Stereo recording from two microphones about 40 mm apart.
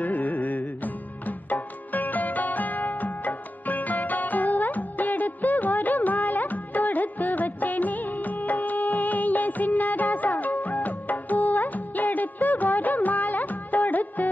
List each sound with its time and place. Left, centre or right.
0.0 s music: left